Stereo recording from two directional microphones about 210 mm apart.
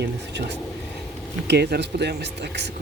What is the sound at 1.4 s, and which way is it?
Speech, 50° right (ahead or behind).